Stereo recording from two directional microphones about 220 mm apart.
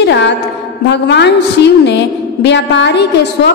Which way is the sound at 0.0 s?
50° left (ahead or behind).